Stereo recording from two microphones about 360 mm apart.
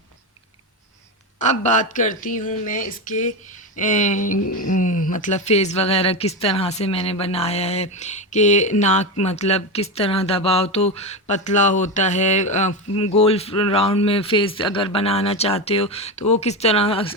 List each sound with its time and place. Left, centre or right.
1.4 s speech: centre